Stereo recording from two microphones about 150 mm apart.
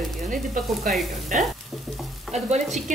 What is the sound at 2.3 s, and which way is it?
Stir, 50° right (ahead or behind).